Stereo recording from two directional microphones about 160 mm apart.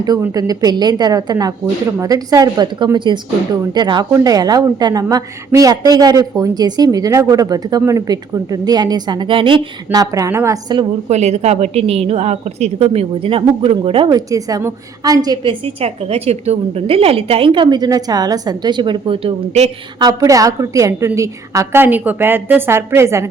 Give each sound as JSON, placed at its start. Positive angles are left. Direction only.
{"t": 0.0, "sound": "speech", "side_deg": -25}
{"t": 11.1, "sound": "a woman's voice", "side_deg": -45}
{"t": 15.6, "sound": "a woman's voice", "side_deg": -40}
{"t": 20.0, "sound": "a woman's voice", "side_deg": -25}